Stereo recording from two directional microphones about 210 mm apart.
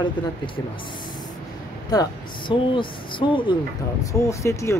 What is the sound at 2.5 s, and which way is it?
Speech, 25° left (ahead or behind).